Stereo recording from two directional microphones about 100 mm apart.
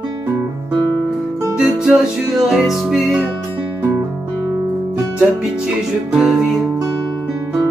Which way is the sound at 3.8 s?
30° right (ahead or behind).